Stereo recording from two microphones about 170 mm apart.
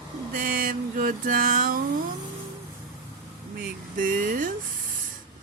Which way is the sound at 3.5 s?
55° right (ahead or behind).